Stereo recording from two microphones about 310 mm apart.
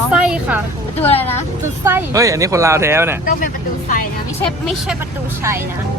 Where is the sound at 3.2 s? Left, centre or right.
Left.